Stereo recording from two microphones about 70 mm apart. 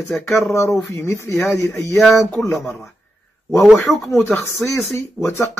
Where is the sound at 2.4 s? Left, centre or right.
Left.